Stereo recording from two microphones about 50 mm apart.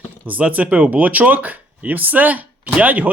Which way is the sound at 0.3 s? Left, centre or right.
Right.